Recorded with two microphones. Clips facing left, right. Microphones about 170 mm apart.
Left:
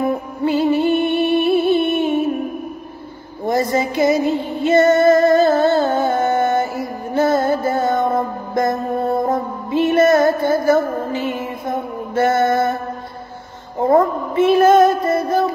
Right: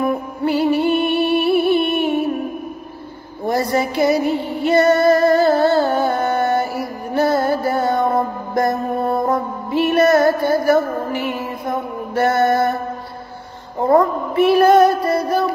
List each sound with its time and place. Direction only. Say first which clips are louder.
0.0 s music: even; 20° left (ahead or behind)
3.7 s music: right 1 dB; 20° left (ahead or behind)
11.2 s mantra: even; 20° left (ahead or behind)
13.9 s a sound: right 1 dB; 20° left (ahead or behind)